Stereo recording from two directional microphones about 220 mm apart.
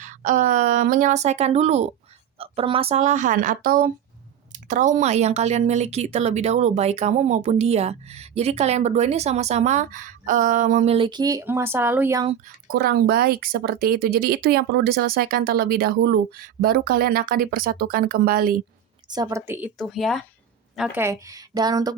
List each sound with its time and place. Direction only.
0.0 s a woman's voice: 35° right (ahead or behind); by 12.3 s 15° right (ahead or behind)
12.6 s speech: 45° right (ahead or behind)
19.0 s speech: 15° right (ahead or behind)